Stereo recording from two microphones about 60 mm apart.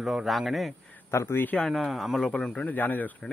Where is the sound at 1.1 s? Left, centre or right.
Left.